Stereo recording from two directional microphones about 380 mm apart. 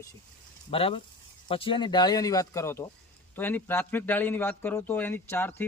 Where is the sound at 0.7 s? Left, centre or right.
Centre.